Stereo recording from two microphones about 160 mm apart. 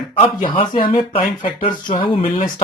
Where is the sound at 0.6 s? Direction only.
35° left (ahead or behind).